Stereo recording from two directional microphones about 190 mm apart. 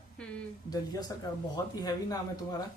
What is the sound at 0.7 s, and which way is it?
Speech, 20° left (ahead or behind).